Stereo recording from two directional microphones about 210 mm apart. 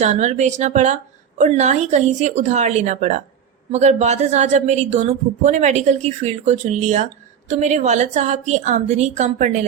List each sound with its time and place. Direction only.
0.0 s a woman's voice: 35° right (ahead or behind)